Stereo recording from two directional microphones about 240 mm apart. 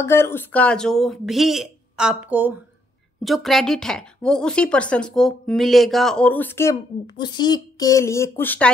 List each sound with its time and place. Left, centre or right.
0.0 s a woman's voice: centre